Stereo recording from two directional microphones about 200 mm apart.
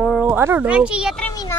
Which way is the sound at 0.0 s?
5° right (ahead or behind).